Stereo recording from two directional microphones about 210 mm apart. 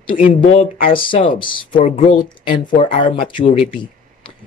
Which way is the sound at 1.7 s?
35° left (ahead or behind).